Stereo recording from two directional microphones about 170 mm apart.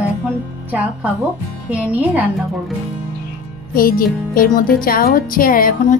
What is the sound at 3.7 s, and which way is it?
Speech, 60° left (ahead or behind).